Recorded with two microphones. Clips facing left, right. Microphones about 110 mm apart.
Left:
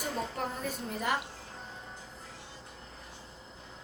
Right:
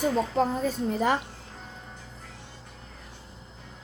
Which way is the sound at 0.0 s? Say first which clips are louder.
Right 10 dB; 90° right.